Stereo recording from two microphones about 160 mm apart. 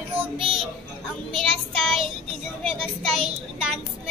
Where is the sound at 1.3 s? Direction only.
5° left (ahead or behind).